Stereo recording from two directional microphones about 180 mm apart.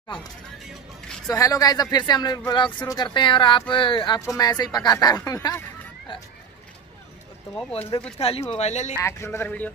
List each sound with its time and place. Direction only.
1.2 s speech: 20° left (ahead or behind)
8.2 s speech: 35° left (ahead or behind)
9.0 s a man's voice: 15° left (ahead or behind)